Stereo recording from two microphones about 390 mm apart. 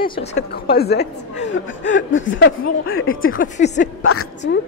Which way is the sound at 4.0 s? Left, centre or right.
Left.